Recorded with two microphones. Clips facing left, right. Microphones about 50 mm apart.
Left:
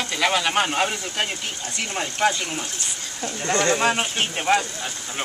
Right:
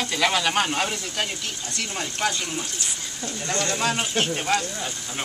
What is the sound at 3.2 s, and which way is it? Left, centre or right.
Speech, left.